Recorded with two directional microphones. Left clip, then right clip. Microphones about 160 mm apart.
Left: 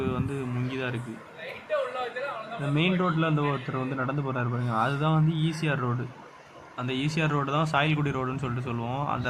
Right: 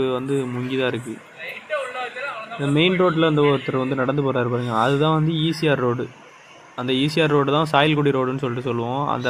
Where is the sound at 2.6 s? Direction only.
30° right (ahead or behind).